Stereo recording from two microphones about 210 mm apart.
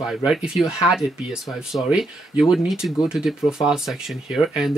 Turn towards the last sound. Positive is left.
turn(degrees=0)  # may be behind; listen again after turning